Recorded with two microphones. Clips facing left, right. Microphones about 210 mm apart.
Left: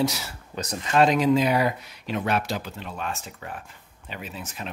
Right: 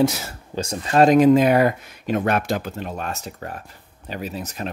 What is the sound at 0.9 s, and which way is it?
Speech, 50° right (ahead or behind).